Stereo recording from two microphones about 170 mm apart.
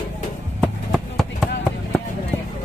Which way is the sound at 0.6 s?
Centre (ahead or behind).